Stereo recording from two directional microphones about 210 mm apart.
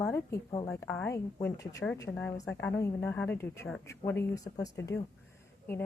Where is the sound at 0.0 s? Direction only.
15° left (ahead or behind).